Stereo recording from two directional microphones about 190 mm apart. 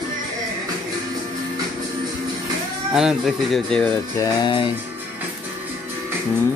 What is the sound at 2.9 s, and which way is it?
Speech, centre (ahead or behind).